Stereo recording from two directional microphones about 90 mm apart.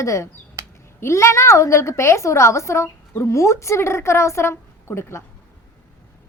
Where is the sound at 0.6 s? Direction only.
35° right (ahead or behind).